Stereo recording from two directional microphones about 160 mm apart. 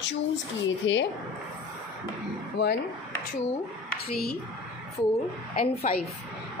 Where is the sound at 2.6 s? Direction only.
90° left.